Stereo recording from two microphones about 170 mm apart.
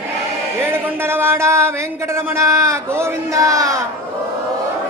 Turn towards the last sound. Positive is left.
turn(degrees=-20)  # may be behind; listen again after turning